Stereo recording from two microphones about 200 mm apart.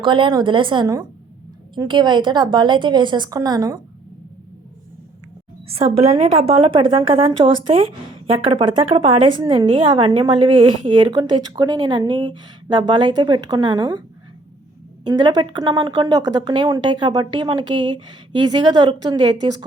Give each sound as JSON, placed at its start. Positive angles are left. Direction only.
{"t": 0.0, "sound": "a woman's voice", "side_deg": -25}
{"t": 5.6, "sound": "a woman's voice", "side_deg": -30}
{"t": 15.0, "sound": "a woman's voice", "side_deg": -20}